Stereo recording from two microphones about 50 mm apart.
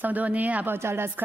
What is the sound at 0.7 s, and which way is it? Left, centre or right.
Speech, right.